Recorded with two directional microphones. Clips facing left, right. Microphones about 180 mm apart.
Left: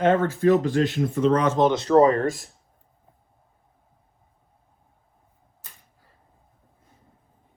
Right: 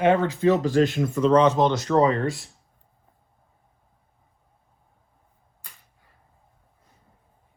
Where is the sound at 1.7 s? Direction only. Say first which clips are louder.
Left 3 dB; 35° left (ahead or behind).